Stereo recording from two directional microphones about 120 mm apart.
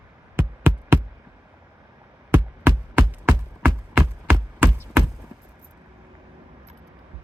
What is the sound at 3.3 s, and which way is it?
Music, 15° right (ahead or behind).